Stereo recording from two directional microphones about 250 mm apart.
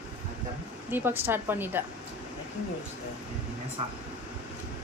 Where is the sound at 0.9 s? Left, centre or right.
Centre.